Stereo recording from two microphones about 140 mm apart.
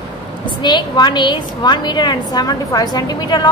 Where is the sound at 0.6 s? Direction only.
30° left (ahead or behind).